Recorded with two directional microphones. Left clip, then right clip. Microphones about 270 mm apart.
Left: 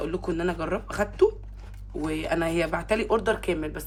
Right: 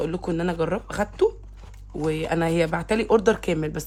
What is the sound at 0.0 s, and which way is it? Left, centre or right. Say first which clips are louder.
Speech: right 2 dB; right.